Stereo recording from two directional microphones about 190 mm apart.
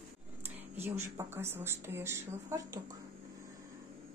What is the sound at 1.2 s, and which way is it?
A woman's voice, 15° right (ahead or behind).